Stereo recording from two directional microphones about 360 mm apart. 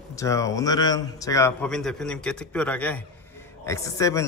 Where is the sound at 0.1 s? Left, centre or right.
Centre.